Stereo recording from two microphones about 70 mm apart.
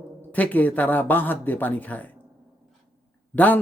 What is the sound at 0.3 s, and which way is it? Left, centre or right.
A man's voice, left.